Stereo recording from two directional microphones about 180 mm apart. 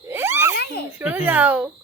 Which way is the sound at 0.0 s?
15° right (ahead or behind).